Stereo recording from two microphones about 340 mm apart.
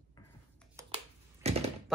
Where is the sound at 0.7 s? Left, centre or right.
Centre.